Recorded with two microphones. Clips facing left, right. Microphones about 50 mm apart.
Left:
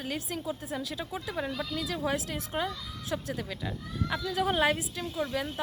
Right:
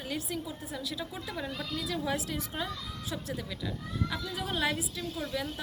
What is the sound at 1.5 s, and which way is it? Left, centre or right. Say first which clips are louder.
Speech: left 2 dB; centre.